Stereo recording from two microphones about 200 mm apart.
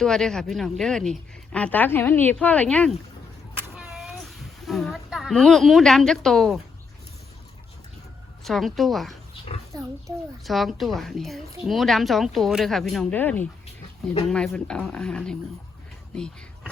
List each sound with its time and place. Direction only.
0.0 s a woman's voice: 5° left (ahead or behind)
3.5 s a sound: 5° right (ahead or behind)
8.4 s a woman's voice: centre (ahead or behind)
9.7 s a child's voice: 20° right (ahead or behind)
10.4 s a woman's voice: centre (ahead or behind)